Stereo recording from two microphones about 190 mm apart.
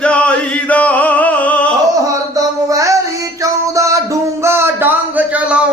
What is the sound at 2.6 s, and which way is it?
Music, 15° right (ahead or behind).